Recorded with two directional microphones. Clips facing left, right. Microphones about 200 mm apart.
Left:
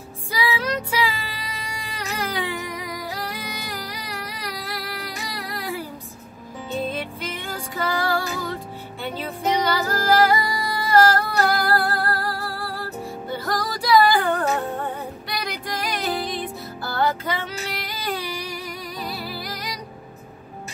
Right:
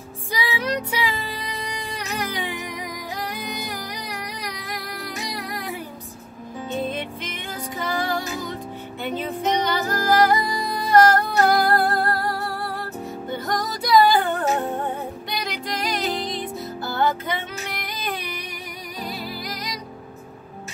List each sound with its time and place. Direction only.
0.4 s music: 20° right (ahead or behind)
7.7 s music: 20° right (ahead or behind)
9.7 s music: 20° right (ahead or behind)